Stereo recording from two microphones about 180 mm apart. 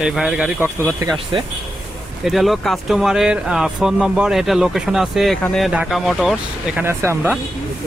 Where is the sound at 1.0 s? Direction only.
20° right (ahead or behind).